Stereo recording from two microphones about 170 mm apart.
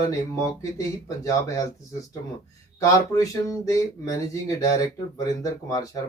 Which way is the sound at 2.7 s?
20° left (ahead or behind).